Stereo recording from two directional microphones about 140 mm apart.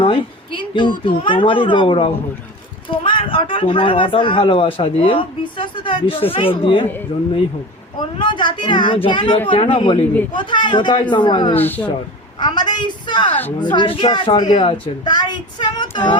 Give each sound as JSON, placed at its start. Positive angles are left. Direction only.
{"t": 0.0, "sound": "a woman's voice", "side_deg": 40}
{"t": 7.9, "sound": "speech", "side_deg": 35}
{"t": 11.5, "sound": "speech", "side_deg": 15}
{"t": 12.4, "sound": "speech", "side_deg": 30}